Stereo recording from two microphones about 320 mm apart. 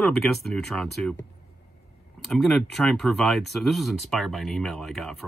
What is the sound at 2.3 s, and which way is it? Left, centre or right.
Speech, centre.